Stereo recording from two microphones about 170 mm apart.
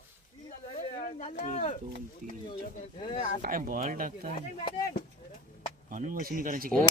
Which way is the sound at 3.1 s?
45° left (ahead or behind).